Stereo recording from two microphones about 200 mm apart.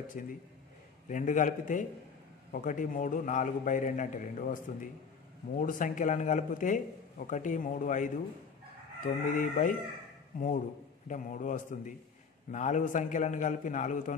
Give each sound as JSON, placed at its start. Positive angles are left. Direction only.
{"t": 0.2, "sound": "a man's voice", "side_deg": 40}
{"t": 11.1, "sound": "a man's voice", "side_deg": 40}